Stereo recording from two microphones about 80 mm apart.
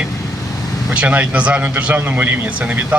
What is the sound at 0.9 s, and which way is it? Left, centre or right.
Speech, centre.